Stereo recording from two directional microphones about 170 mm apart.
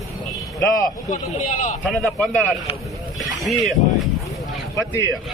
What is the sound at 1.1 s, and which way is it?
Speech, 45° left (ahead or behind).